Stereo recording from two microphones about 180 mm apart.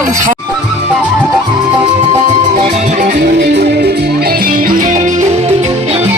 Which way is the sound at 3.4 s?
65° right (ahead or behind).